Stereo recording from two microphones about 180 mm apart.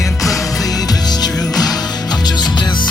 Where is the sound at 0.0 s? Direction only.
Centre (ahead or behind).